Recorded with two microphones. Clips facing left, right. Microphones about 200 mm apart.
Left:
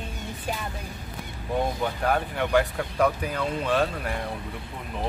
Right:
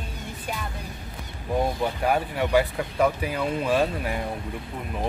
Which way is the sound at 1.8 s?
10° right (ahead or behind).